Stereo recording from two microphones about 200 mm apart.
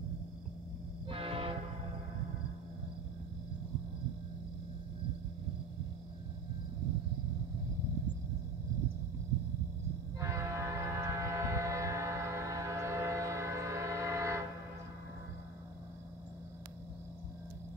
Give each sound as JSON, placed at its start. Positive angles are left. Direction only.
{"t": 1.0, "sound": "train", "side_deg": -30}
{"t": 10.2, "sound": "train", "side_deg": -15}